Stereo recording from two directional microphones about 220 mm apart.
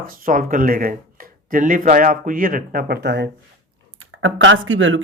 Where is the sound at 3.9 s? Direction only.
65° right (ahead or behind).